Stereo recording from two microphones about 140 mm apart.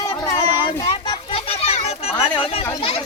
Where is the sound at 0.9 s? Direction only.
40° left (ahead or behind).